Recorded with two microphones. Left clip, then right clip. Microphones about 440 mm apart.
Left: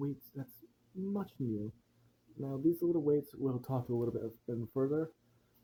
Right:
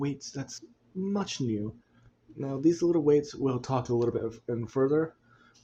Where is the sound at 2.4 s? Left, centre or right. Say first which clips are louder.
Right 7 dB; left.